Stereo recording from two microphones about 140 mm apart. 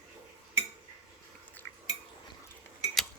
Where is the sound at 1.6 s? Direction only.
15° left (ahead or behind).